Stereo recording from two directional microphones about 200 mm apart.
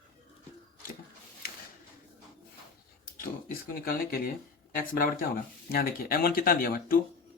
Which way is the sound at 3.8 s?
45° left (ahead or behind).